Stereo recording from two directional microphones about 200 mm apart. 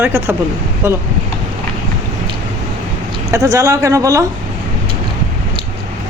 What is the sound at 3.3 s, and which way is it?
Speech, 15° right (ahead or behind).